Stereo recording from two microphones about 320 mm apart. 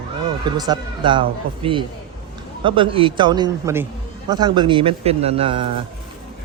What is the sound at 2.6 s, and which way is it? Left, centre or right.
Speech, centre.